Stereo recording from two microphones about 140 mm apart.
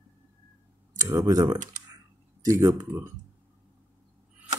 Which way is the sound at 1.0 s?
25° right (ahead or behind).